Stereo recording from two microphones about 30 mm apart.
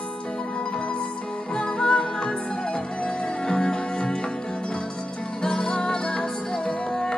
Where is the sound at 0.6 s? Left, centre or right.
Left.